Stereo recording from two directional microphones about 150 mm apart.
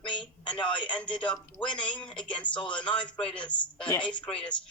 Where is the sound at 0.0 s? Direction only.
35° left (ahead or behind).